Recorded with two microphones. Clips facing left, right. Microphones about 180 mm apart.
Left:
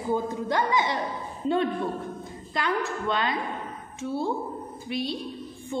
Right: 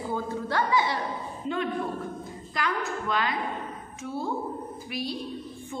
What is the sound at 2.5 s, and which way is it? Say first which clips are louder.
A woman's voice: left 2 dB; 25° left (ahead or behind).